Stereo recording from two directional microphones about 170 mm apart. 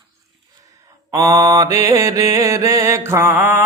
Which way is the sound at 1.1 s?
20° right (ahead or behind).